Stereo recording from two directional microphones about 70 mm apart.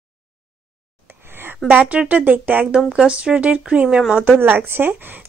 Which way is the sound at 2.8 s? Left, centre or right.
Centre.